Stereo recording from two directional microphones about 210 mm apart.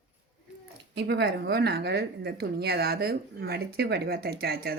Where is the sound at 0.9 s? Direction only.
50° right (ahead or behind).